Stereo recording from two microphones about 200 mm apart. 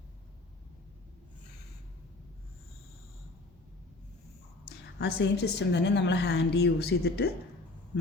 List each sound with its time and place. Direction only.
4.9 s a woman's voice: 60° left (ahead or behind)